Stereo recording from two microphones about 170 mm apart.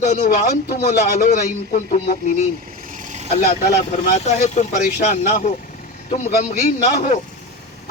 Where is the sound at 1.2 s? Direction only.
55° left (ahead or behind).